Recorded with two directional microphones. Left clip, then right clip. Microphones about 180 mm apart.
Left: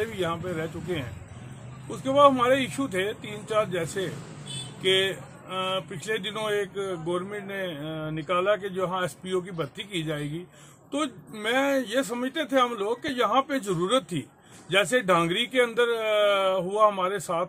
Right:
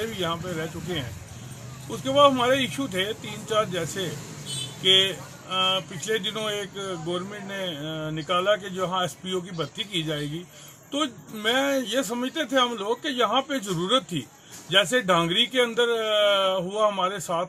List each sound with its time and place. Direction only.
0.2 s speech: 10° left (ahead or behind)
2.0 s speech: 10° left (ahead or behind)
10.9 s speech: 10° left (ahead or behind)